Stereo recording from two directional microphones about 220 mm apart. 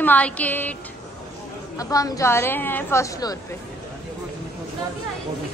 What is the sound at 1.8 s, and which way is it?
A woman's voice, 15° left (ahead or behind).